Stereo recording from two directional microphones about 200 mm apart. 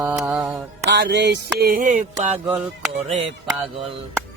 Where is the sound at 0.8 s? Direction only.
60° right (ahead or behind); by 1.9 s 40° right (ahead or behind).